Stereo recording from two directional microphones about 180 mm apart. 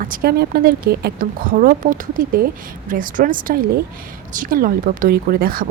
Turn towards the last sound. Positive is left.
turn(degrees=-55)  # may be behind; listen again after turning